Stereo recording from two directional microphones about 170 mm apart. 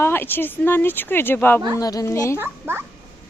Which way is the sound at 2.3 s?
15° right (ahead or behind).